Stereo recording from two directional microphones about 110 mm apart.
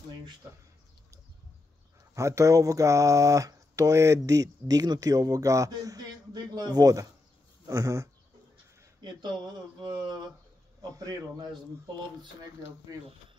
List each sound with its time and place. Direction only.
2.1 s speech: 25° right (ahead or behind)
7.6 s a sound: 30° right (ahead or behind)
10.8 s speech: 35° right (ahead or behind)